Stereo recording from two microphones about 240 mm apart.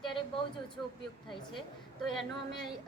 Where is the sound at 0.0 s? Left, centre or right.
Left.